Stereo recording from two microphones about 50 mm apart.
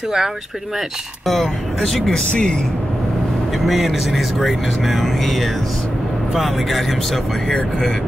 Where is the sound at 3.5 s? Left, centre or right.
Centre.